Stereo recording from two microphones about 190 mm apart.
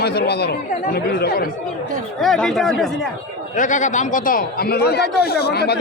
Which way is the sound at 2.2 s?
Centre (ahead or behind).